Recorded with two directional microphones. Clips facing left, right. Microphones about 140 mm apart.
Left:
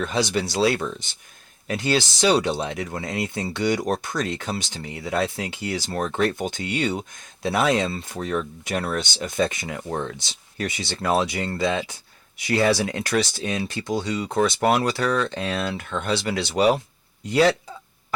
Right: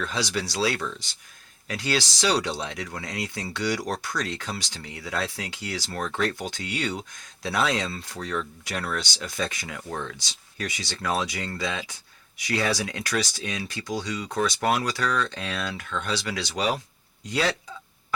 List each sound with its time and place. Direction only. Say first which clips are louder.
0.0 s speech: left 5 dB; 25° left (ahead or behind)